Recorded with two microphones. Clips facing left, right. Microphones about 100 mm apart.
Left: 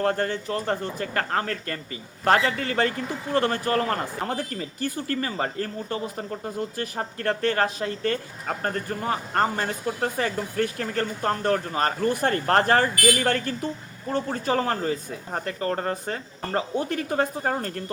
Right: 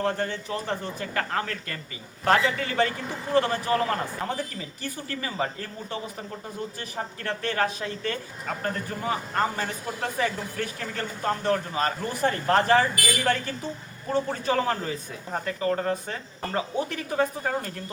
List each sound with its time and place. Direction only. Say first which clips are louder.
0.0 s speech: left 3 dB; 50° left (ahead or behind)
14.1 s speech: even; 35° left (ahead or behind)